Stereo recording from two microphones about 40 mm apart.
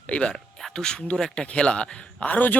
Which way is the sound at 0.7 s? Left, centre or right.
Centre.